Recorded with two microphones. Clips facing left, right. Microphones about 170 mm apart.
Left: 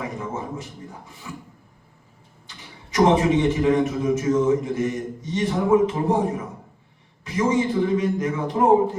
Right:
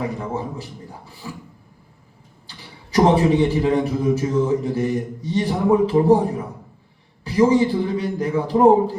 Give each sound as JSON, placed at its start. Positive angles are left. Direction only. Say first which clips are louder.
{"t": 0.0, "sound": "a man's voice", "louder": "right 4 dB", "side_deg": -35}
{"t": 2.5, "sound": "a man's voice", "louder": "right 2 dB", "side_deg": -35}